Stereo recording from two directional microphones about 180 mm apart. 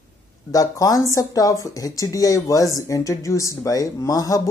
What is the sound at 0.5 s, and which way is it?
A man's voice, 20° left (ahead or behind).